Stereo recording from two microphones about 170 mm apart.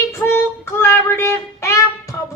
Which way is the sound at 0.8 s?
15° left (ahead or behind).